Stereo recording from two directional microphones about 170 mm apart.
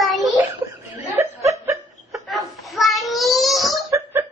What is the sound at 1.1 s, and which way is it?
Chuckle, 20° right (ahead or behind).